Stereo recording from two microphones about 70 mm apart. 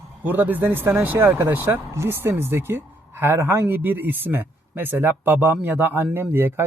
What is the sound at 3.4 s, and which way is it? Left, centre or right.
Speech, right.